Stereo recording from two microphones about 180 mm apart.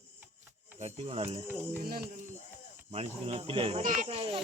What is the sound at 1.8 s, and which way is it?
Speech, 55° right (ahead or behind).